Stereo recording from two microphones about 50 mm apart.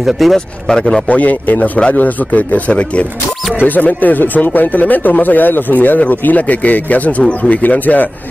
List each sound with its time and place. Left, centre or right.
0.0 s speech: centre
0.7 s speech: centre
1.0 s speech: left